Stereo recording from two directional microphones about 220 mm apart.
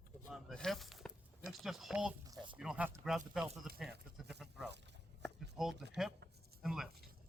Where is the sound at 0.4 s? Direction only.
Centre (ahead or behind).